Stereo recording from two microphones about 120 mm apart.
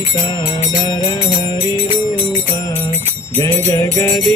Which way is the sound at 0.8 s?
35° left (ahead or behind).